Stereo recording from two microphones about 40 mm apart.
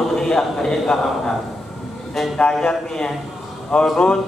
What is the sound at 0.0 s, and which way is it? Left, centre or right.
A man's voice, centre.